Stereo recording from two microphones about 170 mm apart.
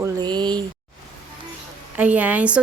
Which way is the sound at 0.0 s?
25° right (ahead or behind).